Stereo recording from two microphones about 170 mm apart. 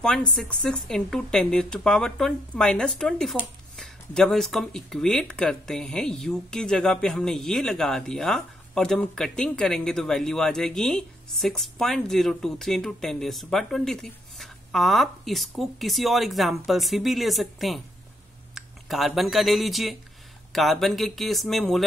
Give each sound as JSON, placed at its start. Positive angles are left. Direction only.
{"t": 0.4, "sound": "speech", "side_deg": 5}